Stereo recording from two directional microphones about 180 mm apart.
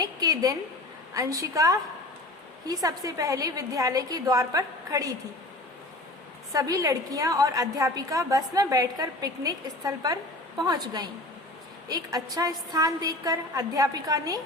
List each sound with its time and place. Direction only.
0.0 s a sound: 20° right (ahead or behind)
1.1 s a woman's voice: 20° right (ahead or behind)
6.5 s a woman's voice: 20° right (ahead or behind)